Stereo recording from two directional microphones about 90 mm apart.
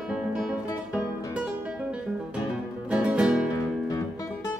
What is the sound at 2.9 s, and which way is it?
Music, 15° right (ahead or behind).